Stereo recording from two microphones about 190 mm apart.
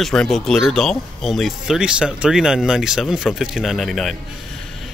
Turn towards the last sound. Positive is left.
turn(degrees=0)  # may be behind; listen again after turning